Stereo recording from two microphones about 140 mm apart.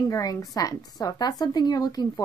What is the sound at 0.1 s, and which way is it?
Speech, 25° left (ahead or behind).